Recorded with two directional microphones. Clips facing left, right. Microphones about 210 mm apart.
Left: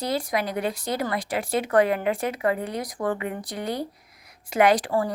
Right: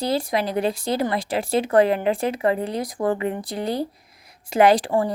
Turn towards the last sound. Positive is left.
turn(degrees=-25)  # may be behind; listen again after turning